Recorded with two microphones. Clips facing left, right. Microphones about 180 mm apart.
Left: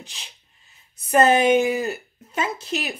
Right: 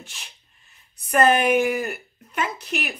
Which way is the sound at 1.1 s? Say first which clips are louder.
Left 2 dB; 25° left (ahead or behind).